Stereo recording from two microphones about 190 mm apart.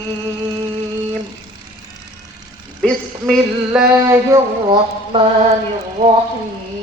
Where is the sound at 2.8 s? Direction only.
Centre (ahead or behind).